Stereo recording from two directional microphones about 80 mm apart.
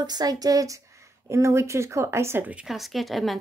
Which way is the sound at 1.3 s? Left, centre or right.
Right.